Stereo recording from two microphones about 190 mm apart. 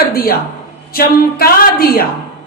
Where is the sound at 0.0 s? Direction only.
50° left (ahead or behind).